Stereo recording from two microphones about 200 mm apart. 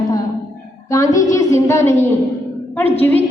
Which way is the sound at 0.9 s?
15° left (ahead or behind).